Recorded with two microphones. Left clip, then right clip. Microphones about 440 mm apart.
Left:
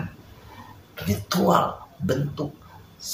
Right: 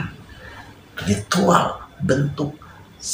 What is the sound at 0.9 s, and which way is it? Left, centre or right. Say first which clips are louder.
Speech: right 5 dB; left.